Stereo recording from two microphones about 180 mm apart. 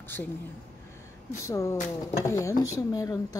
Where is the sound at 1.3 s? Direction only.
15° left (ahead or behind).